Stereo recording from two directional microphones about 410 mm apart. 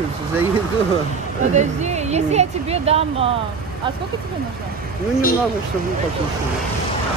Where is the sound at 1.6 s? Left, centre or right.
Centre.